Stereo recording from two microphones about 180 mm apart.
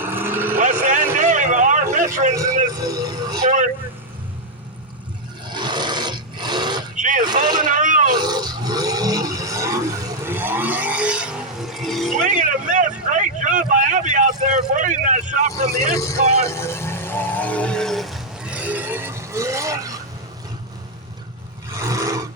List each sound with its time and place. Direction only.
0.0 s vehicle: 10° right (ahead or behind)
0.5 s a sound: 45° right (ahead or behind)
1.1 s vehicle: 45° right (ahead or behind)
2.7 s vehicle: 20° right (ahead or behind)
5.5 s a sound: 25° right (ahead or behind)
6.9 s vehicle: 45° right (ahead or behind)
8.1 s a sound: 25° right (ahead or behind); by 12.1 s centre (ahead or behind)
12.3 s vehicle: 45° right (ahead or behind)
16.5 s vehicle: 15° left (ahead or behind); by 20.0 s 20° right (ahead or behind)
21.8 s vehicle: 20° right (ahead or behind)